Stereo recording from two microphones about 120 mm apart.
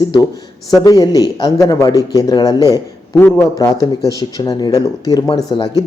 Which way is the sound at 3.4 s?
30° left (ahead or behind).